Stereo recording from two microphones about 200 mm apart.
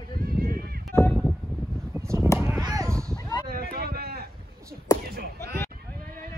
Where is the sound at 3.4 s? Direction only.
50° right (ahead or behind).